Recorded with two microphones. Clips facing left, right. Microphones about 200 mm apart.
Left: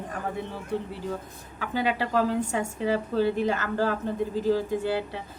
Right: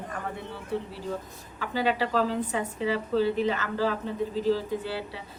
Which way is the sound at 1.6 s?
50° left (ahead or behind).